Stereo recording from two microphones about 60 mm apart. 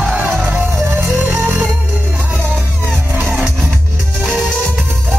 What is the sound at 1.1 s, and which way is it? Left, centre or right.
Music, centre.